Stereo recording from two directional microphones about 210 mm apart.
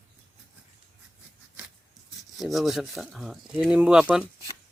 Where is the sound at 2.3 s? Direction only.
Centre (ahead or behind).